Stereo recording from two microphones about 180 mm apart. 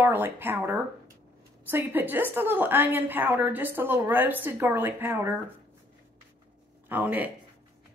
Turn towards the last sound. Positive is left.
turn(degrees=-10)  # may be behind; listen again after turning